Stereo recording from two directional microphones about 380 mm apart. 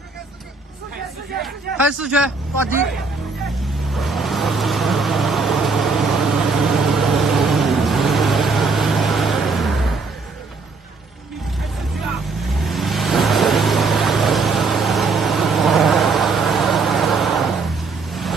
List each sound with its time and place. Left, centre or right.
1.4 s a man's voice: centre
3.9 s vehicle: centre
12.5 s vehicle: centre